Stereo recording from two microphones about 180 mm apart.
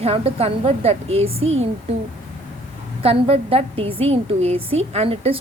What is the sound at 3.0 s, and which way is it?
A woman's voice, 30° right (ahead or behind).